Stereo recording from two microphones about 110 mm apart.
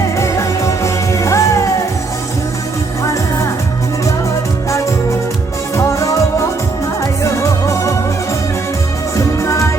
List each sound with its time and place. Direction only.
0.2 s music: 25° left (ahead or behind)
5.7 s music: 30° left (ahead or behind)
9.1 s music: 30° left (ahead or behind)